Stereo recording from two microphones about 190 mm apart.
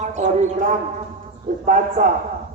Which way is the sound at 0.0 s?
40° right (ahead or behind).